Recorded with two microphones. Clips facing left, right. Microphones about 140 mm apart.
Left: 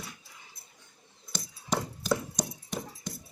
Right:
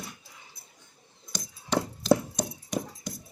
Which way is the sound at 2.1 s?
55° right (ahead or behind).